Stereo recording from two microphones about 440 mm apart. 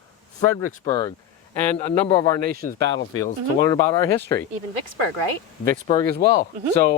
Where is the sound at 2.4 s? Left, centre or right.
Centre.